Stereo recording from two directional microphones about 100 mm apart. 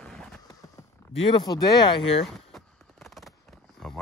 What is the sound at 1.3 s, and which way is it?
Speech, 45° left (ahead or behind).